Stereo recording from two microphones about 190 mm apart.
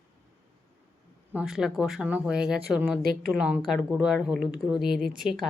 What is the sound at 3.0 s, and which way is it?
Speech, 50° right (ahead or behind).